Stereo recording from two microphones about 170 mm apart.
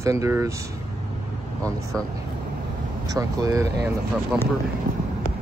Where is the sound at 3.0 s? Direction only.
20° right (ahead or behind).